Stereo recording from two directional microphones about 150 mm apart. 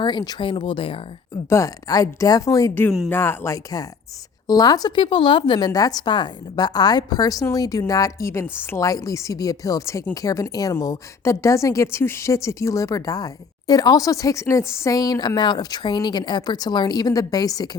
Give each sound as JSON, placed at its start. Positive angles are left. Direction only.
{"t": 0.0, "sound": "speech", "side_deg": 30}
{"t": 1.5, "sound": "speech", "side_deg": 20}